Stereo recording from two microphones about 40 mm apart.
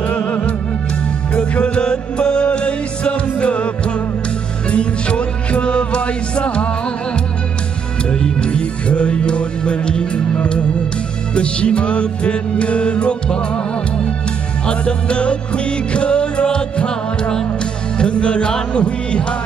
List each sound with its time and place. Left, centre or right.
0.0 s music: left
1.3 s music: left
8.1 s music: left
14.7 s music: left